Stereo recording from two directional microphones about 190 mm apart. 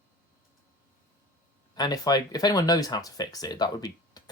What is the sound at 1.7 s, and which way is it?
Speech, 20° left (ahead or behind).